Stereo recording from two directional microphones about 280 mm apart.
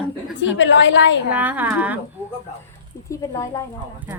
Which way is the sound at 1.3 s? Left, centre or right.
Centre.